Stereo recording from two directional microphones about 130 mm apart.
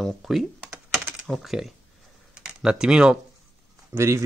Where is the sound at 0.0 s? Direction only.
Centre (ahead or behind).